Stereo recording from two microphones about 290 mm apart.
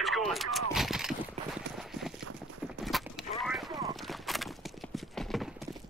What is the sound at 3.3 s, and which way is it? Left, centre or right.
Clip-clop, centre.